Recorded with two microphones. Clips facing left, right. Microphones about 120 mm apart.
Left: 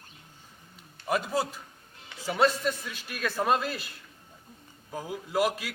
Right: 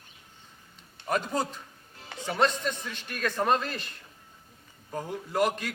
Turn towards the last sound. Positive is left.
turn(degrees=5)  # may be behind; listen again after turning